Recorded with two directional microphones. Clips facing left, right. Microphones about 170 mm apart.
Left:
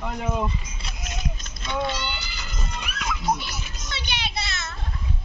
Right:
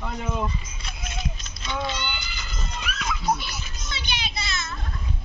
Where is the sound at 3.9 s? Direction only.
65° left (ahead or behind).